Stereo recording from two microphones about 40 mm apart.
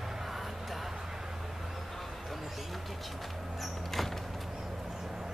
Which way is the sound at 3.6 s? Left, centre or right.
Centre.